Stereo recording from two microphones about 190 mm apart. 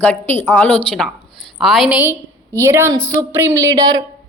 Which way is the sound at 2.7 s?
15° right (ahead or behind).